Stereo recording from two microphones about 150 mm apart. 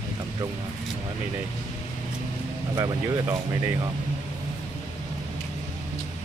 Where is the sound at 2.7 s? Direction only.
20° right (ahead or behind).